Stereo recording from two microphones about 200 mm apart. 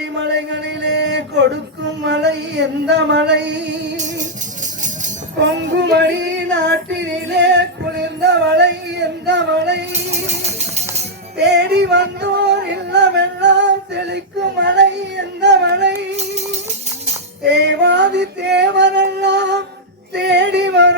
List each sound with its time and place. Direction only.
0.0 s a sound: 60° right (ahead or behind)
5.4 s female singing: 60° right (ahead or behind)
10.6 s music: 35° right (ahead or behind)
11.4 s music: 60° right (ahead or behind)
17.4 s music: 60° right (ahead or behind)
20.1 s female singing: 60° right (ahead or behind)